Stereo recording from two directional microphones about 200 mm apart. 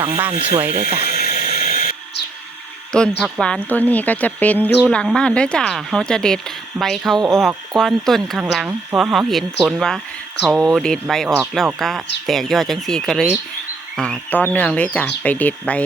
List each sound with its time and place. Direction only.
0.0 s speech: 10° right (ahead or behind)
0.7 s speech: 30° right (ahead or behind)
0.9 s water: 50° left (ahead or behind)
1.5 s a sound: 45° left (ahead or behind)
2.9 s speech: 5° left (ahead or behind)